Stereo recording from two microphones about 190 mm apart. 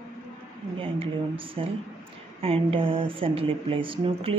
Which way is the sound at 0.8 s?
30° right (ahead or behind).